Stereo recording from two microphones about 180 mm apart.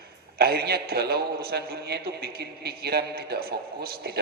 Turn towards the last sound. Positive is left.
turn(degrees=-60)  # may be behind; listen again after turning